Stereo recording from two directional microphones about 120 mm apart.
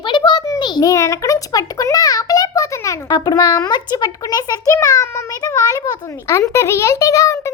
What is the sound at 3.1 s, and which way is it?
A child's voice, 35° left (ahead or behind).